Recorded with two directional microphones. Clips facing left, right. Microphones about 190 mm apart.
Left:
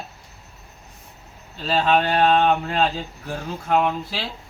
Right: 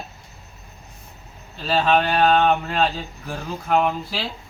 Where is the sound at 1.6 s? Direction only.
10° right (ahead or behind).